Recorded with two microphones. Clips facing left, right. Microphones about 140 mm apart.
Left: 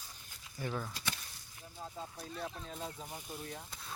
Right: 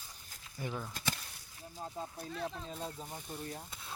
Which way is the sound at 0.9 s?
50° right (ahead or behind).